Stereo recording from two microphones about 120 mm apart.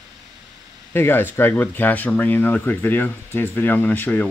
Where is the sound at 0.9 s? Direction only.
20° left (ahead or behind).